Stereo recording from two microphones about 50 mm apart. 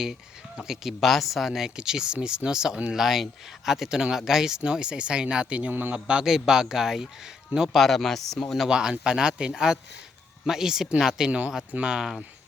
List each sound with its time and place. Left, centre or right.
0.0 s speech: centre
0.9 s speech: centre
2.9 s a man's voice: centre; by 6.2 s right
6.2 s speech: centre
7.7 s speech: centre
8.7 s speech: centre
11.3 s a man's voice: right
11.9 s speech: centre